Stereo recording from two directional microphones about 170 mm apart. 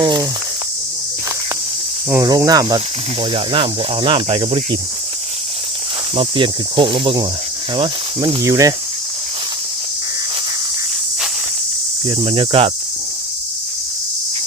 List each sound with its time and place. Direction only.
0.0 s speech: 25° right (ahead or behind)
2.0 s speech: 20° right (ahead or behind)
6.1 s speech: 30° right (ahead or behind)
12.0 s cricket: 30° right (ahead or behind)